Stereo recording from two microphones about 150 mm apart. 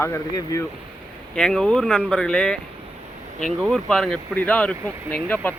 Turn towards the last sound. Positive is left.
turn(degrees=10)  # may be behind; listen again after turning